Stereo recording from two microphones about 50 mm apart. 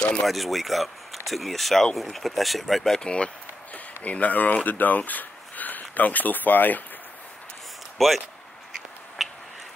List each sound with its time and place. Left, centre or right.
0.0 s speech: centre
0.3 s speech: centre
3.0 s speech: centre
3.7 s speech: left
8.0 s speech: centre
9.2 s a sound: centre